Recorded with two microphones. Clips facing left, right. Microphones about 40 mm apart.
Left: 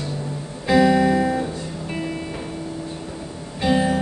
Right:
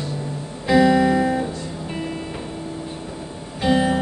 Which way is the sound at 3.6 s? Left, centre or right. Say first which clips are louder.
Right 1 dB; centre.